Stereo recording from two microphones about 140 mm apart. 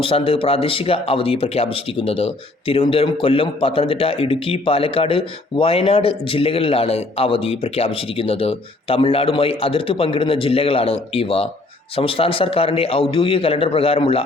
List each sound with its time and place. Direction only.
0.0 s a man's voice: 40° left (ahead or behind)